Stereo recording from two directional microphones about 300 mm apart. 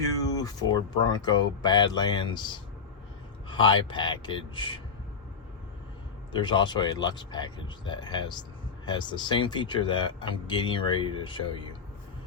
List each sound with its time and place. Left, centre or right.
0.2 s speech: centre
6.3 s speech: centre